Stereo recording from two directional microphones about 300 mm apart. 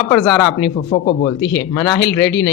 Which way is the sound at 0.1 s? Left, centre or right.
Centre.